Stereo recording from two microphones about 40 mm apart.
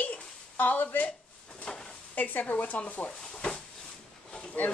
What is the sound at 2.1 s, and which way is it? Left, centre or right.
Speech, left.